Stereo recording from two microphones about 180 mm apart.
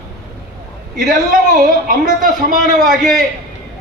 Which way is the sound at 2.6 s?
Centre (ahead or behind).